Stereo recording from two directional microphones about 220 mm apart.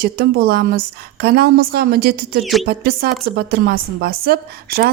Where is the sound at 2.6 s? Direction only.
45° right (ahead or behind).